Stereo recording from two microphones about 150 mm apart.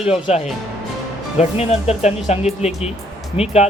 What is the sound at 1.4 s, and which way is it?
Speech, 45° left (ahead or behind).